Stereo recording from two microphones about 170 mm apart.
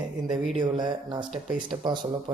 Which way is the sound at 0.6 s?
25° right (ahead or behind).